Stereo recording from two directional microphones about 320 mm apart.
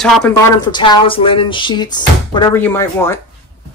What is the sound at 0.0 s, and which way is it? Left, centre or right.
Speech, centre.